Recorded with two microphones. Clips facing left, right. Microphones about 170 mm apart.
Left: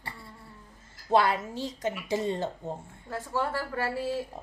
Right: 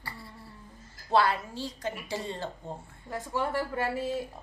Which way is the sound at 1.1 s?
20° left (ahead or behind).